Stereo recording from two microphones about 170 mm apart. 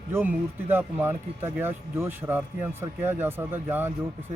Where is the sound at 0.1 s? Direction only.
10° right (ahead or behind).